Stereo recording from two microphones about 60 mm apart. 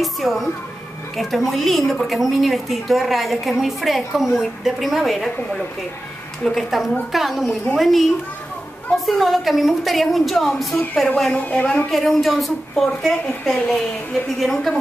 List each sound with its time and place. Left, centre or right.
0.0 s a woman's voice: centre
6.4 s a woman's voice: centre
11.3 s a man's voice: left
11.9 s a woman's voice: centre